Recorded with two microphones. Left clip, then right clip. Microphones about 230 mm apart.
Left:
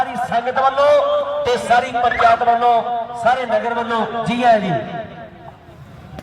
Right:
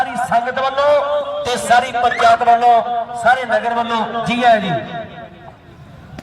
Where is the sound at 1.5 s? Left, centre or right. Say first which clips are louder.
Right 2 dB; right.